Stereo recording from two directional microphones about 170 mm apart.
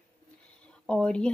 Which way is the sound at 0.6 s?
5° left (ahead or behind).